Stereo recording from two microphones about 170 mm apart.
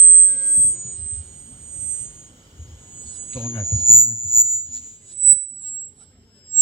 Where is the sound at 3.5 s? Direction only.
30° left (ahead or behind).